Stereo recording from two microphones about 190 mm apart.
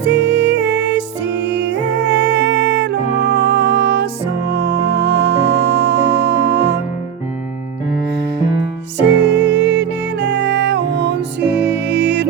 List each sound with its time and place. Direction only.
0.0 s music: 65° right (ahead or behind)
9.0 s music: 65° right (ahead or behind)